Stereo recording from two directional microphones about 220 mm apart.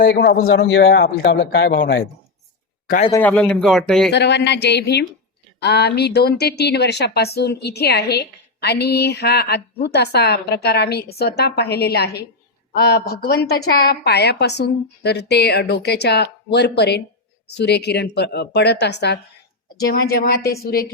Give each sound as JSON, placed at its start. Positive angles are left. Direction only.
{"t": 0.0, "sound": "speech", "side_deg": 45}
{"t": 0.4, "sound": "speech", "side_deg": 60}
{"t": 3.1, "sound": "speech", "side_deg": 10}
{"t": 4.1, "sound": "speech", "side_deg": 50}